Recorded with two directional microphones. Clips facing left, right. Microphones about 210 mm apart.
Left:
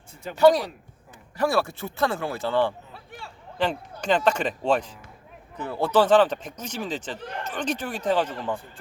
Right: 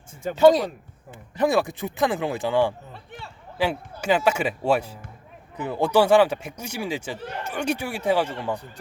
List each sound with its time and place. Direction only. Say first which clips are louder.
0.2 s speech: right 6 dB; 45° right (ahead or behind)
1.1 s speech: right 2 dB; 20° right (ahead or behind)
2.9 s a sound: right 2 dB; centre (ahead or behind)
3.6 s speech: right 1 dB; 10° right (ahead or behind)